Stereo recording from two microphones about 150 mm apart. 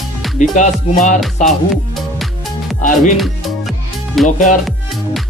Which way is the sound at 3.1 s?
Centre (ahead or behind).